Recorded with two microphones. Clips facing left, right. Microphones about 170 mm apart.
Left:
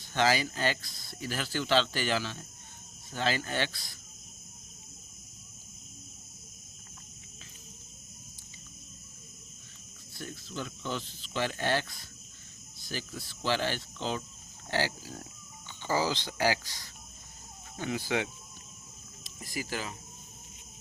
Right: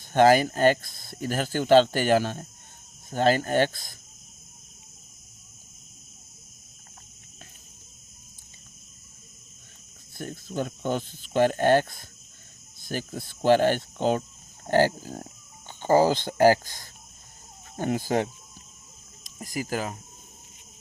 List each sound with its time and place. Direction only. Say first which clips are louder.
0.1 s speech: right 10 dB; 50° right (ahead or behind)
10.2 s speech: right 8 dB; 50° right (ahead or behind)